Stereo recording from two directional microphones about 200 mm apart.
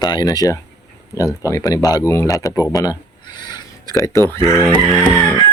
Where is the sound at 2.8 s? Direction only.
20° left (ahead or behind).